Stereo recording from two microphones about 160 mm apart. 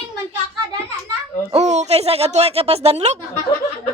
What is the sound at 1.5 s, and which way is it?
A woman's voice, 45° right (ahead or behind).